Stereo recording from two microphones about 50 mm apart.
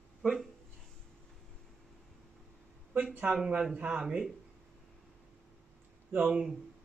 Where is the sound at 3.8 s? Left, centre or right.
Right.